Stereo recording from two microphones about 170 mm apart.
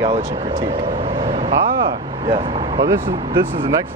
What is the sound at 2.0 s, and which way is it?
Speech, 30° right (ahead or behind).